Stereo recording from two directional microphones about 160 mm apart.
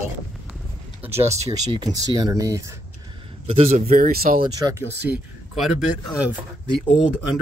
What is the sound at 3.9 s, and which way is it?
Speech, 65° right (ahead or behind).